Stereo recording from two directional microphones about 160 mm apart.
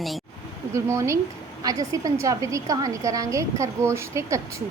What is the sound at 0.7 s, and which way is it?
A woman's voice, 20° right (ahead or behind).